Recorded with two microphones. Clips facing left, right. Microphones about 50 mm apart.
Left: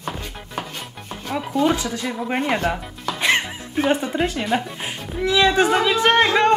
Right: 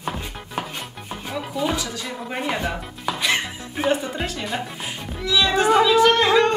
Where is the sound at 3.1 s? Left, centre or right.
Centre.